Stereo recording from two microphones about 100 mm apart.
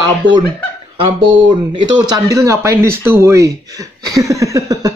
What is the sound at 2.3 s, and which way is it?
Speech, 30° right (ahead or behind).